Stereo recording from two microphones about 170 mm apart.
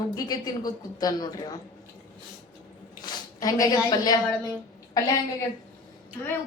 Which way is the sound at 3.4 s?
20° left (ahead or behind).